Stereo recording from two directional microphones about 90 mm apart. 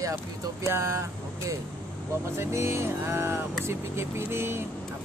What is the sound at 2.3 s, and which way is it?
Speech, 30° right (ahead or behind).